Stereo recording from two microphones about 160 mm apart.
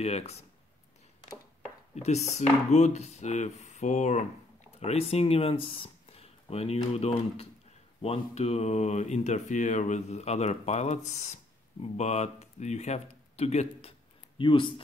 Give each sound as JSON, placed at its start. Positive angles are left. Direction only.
{"t": 0.0, "sound": "speech", "side_deg": 40}
{"t": 2.0, "sound": "speech", "side_deg": 45}